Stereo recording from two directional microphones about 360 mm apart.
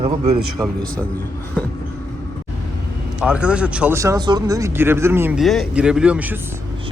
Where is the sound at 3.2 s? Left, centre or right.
Centre.